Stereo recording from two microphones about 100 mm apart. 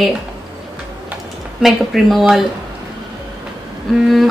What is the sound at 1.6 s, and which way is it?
Speech, centre (ahead or behind).